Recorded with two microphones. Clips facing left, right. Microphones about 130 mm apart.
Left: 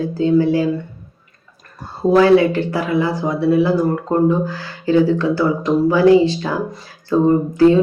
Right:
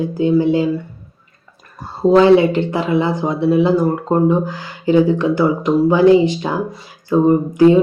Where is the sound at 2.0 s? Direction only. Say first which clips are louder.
Right 2 dB; 20° right (ahead or behind).